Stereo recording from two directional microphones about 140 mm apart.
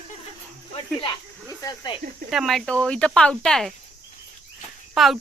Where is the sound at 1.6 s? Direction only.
30° left (ahead or behind).